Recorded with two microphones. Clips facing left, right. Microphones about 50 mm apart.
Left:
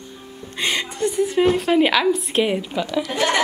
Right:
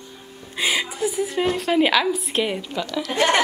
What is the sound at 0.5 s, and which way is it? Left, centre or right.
A woman's voice, centre.